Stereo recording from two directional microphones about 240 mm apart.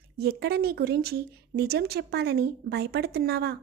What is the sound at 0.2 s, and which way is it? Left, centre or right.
Speech, right.